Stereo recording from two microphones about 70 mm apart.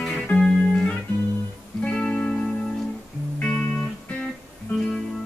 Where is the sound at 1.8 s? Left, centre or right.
Centre.